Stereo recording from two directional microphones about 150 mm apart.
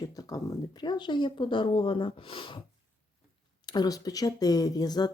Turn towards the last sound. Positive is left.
turn(degrees=25)  # may be behind; listen again after turning